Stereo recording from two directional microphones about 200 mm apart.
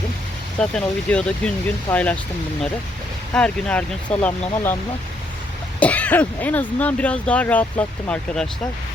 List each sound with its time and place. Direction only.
0.6 s speech: 5° left (ahead or behind)
3.3 s speech: 5° left (ahead or behind)
5.8 s speech: 5° left (ahead or behind)